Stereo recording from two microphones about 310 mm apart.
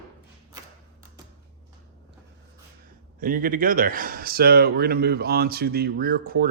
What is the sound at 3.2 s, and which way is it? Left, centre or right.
Speech, right.